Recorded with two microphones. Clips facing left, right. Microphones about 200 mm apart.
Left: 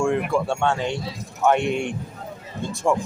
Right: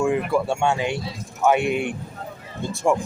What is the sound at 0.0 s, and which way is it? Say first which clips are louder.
Speech: right 1 dB; 5° right (ahead or behind).